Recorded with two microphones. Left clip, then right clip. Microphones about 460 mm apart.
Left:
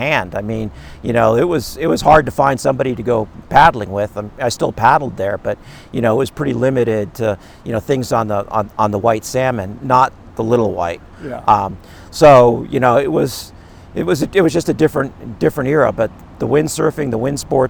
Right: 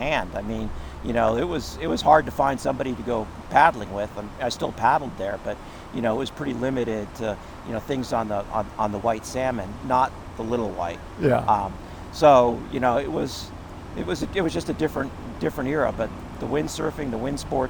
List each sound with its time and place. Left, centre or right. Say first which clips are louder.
0.0 s speech: left 8 dB; left
11.2 s speech: right 6 dB; right
11.4 s speech: left 9 dB; left